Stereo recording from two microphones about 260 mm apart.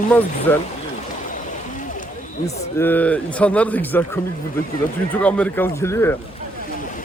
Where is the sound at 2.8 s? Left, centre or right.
Centre.